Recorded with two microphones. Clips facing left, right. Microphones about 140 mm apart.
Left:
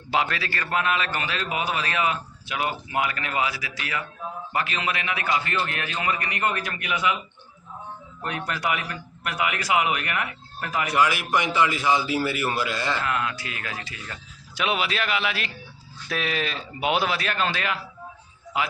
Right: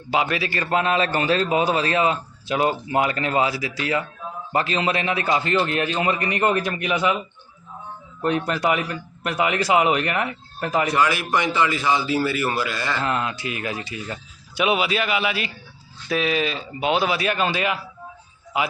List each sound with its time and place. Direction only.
0.3 s a man's voice: 15° right (ahead or behind)
8.2 s a man's voice: 25° right (ahead or behind)
10.9 s a man's voice: 15° left (ahead or behind)
13.0 s a man's voice: 30° right (ahead or behind); by 17.1 s 5° left (ahead or behind)
17.1 s speech: 10° right (ahead or behind)